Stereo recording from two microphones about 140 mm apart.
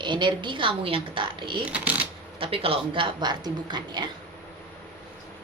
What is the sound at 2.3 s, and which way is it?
A woman's voice, 40° right (ahead or behind).